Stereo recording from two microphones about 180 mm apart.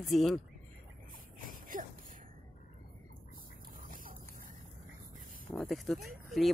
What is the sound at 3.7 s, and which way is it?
Dog, 50° right (ahead or behind).